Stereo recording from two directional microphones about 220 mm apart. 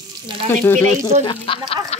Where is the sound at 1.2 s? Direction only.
25° left (ahead or behind).